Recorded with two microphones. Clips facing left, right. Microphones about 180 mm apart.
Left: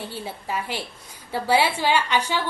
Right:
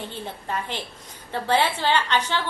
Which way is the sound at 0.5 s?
10° left (ahead or behind).